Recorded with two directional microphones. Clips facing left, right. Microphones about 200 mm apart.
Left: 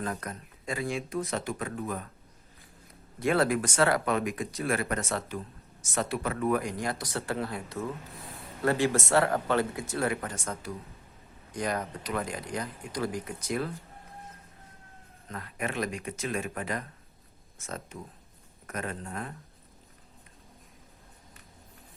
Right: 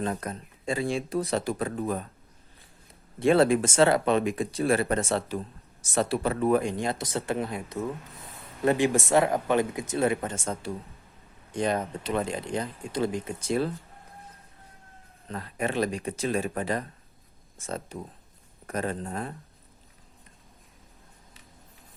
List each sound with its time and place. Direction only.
0.0 s speech: 25° right (ahead or behind)
3.2 s speech: 25° right (ahead or behind)
15.3 s speech: 30° right (ahead or behind)